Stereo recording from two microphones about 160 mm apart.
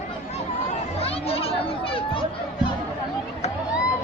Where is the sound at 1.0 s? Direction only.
35° left (ahead or behind).